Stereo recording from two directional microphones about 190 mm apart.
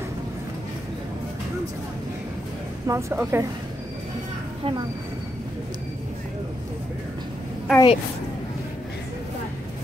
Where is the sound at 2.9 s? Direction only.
15° right (ahead or behind).